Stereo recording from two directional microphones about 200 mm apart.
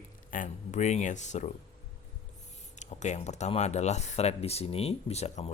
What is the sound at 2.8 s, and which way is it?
Speech, 35° left (ahead or behind).